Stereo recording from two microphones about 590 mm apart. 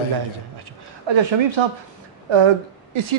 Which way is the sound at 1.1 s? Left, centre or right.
Right.